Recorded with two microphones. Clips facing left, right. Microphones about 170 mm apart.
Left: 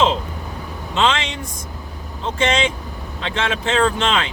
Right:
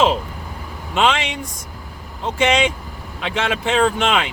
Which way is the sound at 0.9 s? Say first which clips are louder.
Right 1 dB; 15° right (ahead or behind).